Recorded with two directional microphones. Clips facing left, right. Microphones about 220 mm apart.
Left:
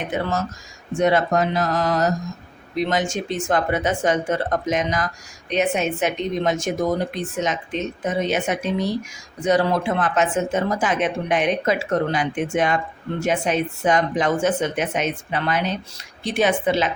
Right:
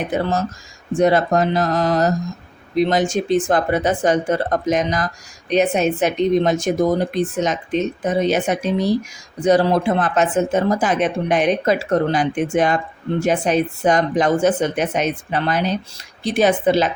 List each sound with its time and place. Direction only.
0.1 s speech: 35° right (ahead or behind)